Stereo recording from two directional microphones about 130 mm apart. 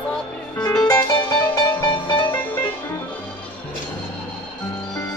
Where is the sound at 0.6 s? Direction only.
30° left (ahead or behind).